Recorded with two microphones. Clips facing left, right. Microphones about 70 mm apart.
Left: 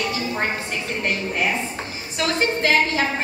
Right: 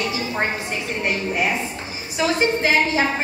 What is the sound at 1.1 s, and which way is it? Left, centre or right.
A woman's voice, centre.